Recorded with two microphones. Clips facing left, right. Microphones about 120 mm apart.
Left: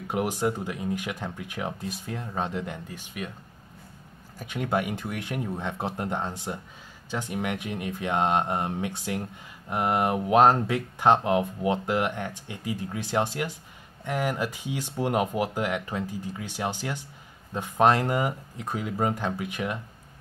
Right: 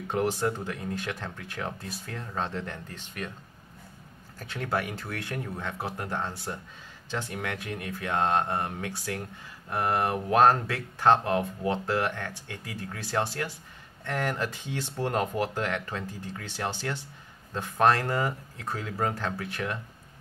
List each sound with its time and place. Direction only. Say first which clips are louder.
0.1 s speech: left 1 dB; 15° left (ahead or behind)
4.4 s speech: left 3 dB; 15° left (ahead or behind)